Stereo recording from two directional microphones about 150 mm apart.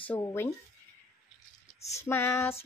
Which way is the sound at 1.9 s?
15° left (ahead or behind).